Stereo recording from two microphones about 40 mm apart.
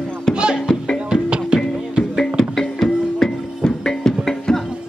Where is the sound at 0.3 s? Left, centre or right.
Right.